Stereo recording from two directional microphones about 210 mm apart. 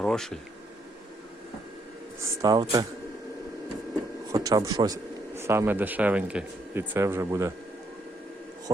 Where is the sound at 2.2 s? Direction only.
15° right (ahead or behind).